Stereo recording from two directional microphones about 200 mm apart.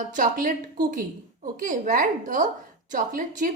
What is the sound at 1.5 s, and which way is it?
A woman's voice, 40° right (ahead or behind).